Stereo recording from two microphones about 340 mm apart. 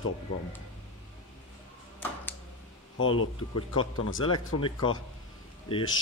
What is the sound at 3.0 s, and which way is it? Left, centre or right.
Speech, left.